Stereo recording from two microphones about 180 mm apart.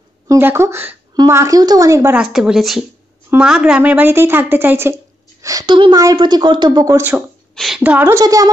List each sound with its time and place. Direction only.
0.3 s a woman's voice: 15° right (ahead or behind)
2.2 s a woman's voice: centre (ahead or behind)
7.5 s a sound: centre (ahead or behind)
7.8 s a woman's voice: 10° right (ahead or behind)